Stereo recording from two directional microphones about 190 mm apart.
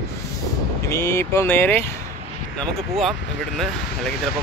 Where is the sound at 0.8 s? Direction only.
15° left (ahead or behind).